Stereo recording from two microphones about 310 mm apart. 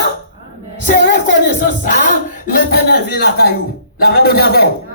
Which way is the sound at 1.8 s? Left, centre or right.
Left.